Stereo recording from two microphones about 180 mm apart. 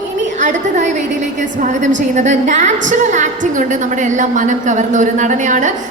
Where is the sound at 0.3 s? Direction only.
40° right (ahead or behind).